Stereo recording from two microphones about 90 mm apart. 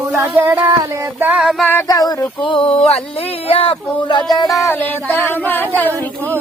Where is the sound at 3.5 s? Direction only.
90° left.